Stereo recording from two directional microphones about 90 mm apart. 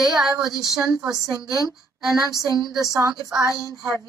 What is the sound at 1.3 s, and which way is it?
Speech, 50° right (ahead or behind).